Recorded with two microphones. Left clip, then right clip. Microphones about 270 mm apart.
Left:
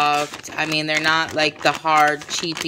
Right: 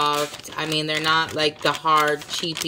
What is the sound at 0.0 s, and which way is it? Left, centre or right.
A woman's voice, centre.